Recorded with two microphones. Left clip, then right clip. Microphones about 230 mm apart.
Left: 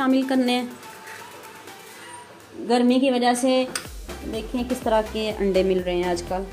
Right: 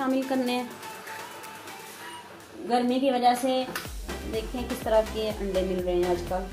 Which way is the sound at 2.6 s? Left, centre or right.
Left.